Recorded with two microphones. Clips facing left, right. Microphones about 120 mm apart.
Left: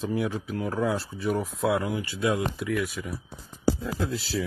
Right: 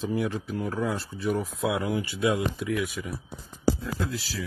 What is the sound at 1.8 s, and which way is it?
Speech, 20° right (ahead or behind).